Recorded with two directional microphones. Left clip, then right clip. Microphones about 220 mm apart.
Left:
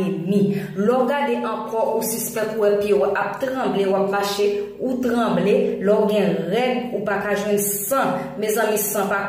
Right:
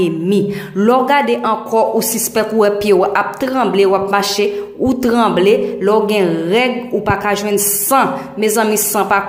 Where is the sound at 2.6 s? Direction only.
40° right (ahead or behind).